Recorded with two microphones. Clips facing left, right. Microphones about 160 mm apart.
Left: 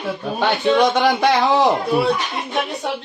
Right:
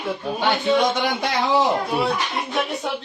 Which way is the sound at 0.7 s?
85° left.